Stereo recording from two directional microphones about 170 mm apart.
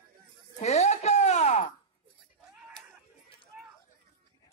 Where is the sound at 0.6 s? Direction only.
40° left (ahead or behind).